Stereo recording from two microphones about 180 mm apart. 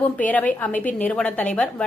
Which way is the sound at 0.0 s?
10° left (ahead or behind).